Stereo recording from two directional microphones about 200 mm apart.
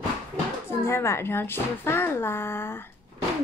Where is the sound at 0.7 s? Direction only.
15° left (ahead or behind).